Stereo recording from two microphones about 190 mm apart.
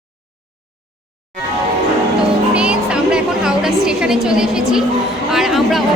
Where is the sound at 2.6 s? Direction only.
5° right (ahead or behind).